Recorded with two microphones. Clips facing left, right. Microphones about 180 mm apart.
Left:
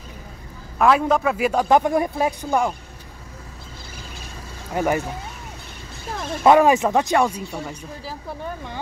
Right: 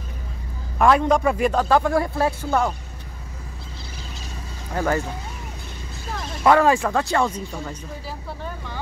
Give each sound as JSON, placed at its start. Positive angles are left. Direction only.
{"t": 0.7, "sound": "a man's voice", "side_deg": 0}
{"t": 4.7, "sound": "a man's voice", "side_deg": 15}
{"t": 6.4, "sound": "a man's voice", "side_deg": 20}